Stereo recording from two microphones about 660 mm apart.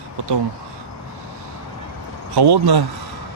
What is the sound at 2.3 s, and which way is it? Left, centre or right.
Speech, right.